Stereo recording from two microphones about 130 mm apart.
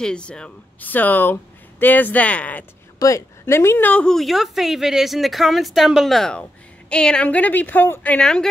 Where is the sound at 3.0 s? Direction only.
20° left (ahead or behind).